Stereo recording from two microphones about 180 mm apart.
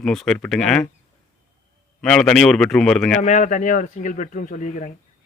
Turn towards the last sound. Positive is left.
turn(degrees=45)  # may be behind; listen again after turning